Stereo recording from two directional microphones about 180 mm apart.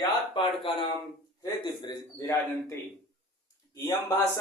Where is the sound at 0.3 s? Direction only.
30° left (ahead or behind).